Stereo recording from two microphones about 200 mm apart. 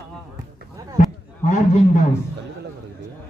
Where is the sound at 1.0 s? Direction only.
35° left (ahead or behind).